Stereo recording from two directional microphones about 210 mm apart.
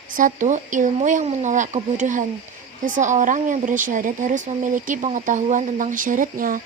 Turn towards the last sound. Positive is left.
turn(degrees=-40)  # may be behind; listen again after turning